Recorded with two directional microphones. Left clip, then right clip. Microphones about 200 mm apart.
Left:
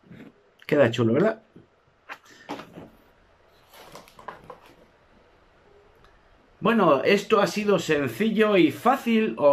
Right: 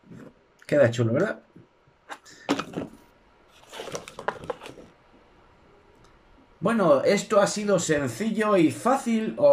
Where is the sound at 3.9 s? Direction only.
50° right (ahead or behind).